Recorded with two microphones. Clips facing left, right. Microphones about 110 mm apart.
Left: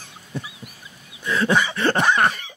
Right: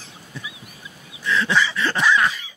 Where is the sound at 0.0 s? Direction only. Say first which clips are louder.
Left 4 dB; 55° left (ahead or behind).